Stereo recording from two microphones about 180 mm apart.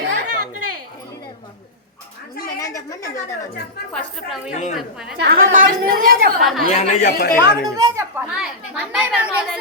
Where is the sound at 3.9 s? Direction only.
Centre (ahead or behind).